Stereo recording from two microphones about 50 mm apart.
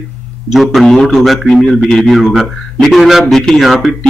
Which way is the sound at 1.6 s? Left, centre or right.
Centre.